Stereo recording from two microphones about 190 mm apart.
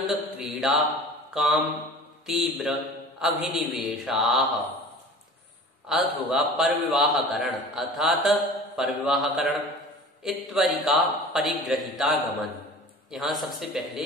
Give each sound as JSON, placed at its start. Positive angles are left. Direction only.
{"t": 0.0, "sound": "mantra", "side_deg": 0}
{"t": 2.2, "sound": "a man's voice", "side_deg": 0}
{"t": 5.9, "sound": "a man's voice", "side_deg": 0}